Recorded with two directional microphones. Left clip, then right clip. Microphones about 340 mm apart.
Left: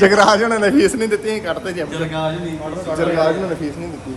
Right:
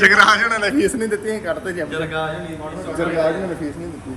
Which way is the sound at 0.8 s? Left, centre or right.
Centre.